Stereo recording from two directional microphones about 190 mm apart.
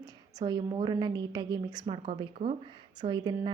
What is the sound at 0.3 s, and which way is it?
A woman's voice, 20° right (ahead or behind).